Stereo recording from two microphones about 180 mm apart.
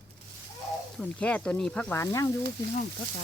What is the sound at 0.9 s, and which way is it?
Speech, 5° left (ahead or behind).